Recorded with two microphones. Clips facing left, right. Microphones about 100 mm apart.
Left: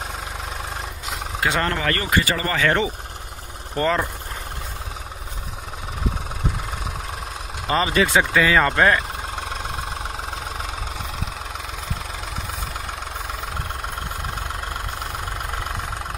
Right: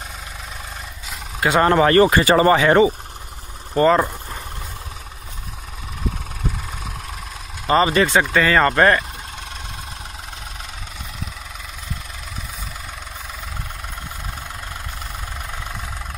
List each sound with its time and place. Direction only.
1.6 s speech: 30° right (ahead or behind)
2.6 s speech: 15° right (ahead or behind)
7.6 s speech: centre (ahead or behind)